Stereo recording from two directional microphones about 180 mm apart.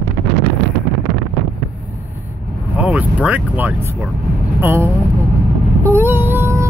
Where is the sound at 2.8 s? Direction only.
5° right (ahead or behind).